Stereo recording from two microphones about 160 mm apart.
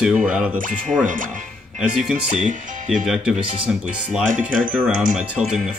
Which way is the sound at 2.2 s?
50° right (ahead or behind).